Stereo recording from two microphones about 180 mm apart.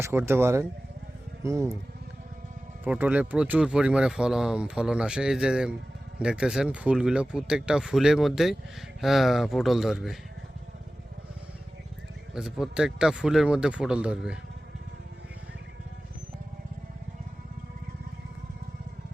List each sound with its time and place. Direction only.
0.0 s speech: 15° right (ahead or behind)
2.8 s speech: 10° right (ahead or behind)
12.3 s speech: 5° right (ahead or behind)